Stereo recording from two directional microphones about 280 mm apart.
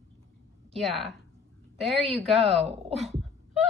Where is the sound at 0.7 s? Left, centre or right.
Centre.